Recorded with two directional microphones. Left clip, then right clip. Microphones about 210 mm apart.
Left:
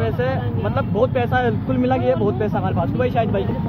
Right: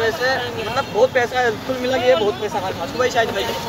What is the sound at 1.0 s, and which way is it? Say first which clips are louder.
Speech: right 3 dB; centre (ahead or behind).